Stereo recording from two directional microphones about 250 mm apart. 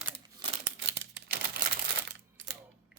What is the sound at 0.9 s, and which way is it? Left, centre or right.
Typewriter, right.